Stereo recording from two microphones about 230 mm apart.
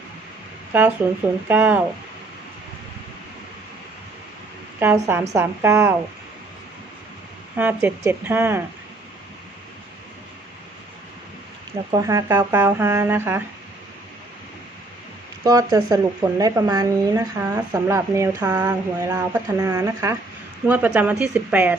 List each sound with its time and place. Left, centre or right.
0.7 s speech: centre
4.8 s speech: centre
7.5 s speech: centre
11.9 s speech: centre
15.4 s speech: centre